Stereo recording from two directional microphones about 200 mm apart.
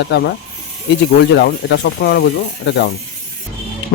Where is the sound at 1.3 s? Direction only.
55° left (ahead or behind).